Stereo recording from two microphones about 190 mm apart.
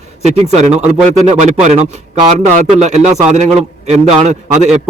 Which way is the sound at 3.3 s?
35° right (ahead or behind).